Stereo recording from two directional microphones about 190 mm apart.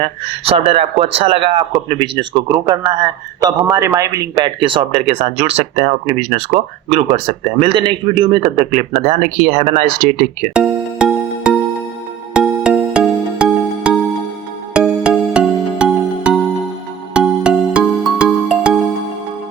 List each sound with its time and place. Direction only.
0.0 s speech: 30° right (ahead or behind)
10.5 s music: 5° right (ahead or behind)
12.3 s music: 5° right (ahead or behind)